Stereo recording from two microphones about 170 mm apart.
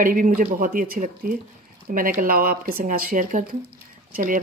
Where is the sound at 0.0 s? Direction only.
55° right (ahead or behind).